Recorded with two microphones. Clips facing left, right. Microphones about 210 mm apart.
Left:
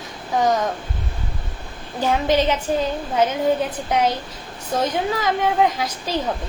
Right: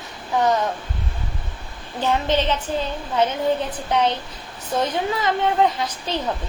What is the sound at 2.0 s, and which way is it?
Speech, 10° left (ahead or behind).